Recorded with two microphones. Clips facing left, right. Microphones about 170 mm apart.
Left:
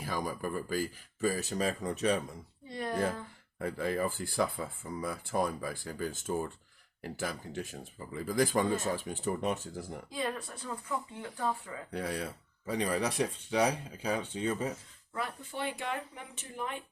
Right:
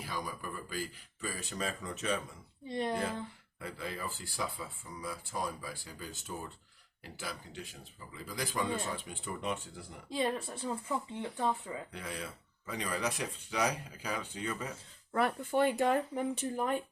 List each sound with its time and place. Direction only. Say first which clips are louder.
0.0 s speech: left 5 dB; 45° left (ahead or behind)
2.6 s speech: right 2 dB; 25° right (ahead or behind)
3.6 s speech: left 9 dB; 45° left (ahead or behind)
10.1 s speech: right 4 dB; 25° right (ahead or behind)
11.9 s speech: left 6 dB; 40° left (ahead or behind)
15.1 s speech: right 8 dB; 60° right (ahead or behind)
15.6 s speech: right 6 dB; 45° right (ahead or behind)